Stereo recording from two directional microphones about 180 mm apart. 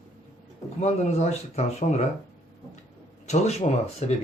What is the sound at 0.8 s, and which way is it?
Speech, 40° left (ahead or behind).